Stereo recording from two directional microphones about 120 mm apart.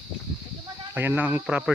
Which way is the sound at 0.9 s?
15° right (ahead or behind).